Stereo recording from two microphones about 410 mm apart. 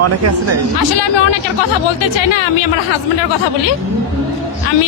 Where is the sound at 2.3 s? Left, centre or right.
Left.